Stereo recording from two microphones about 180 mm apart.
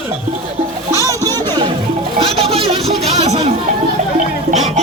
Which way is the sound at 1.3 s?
25° right (ahead or behind).